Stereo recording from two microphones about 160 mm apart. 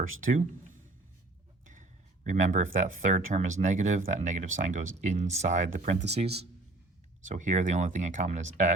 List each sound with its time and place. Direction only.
1.6 s a man's voice: 50° right (ahead or behind)